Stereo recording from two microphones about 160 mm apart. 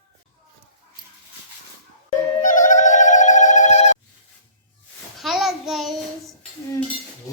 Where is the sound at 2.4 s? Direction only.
55° left (ahead or behind).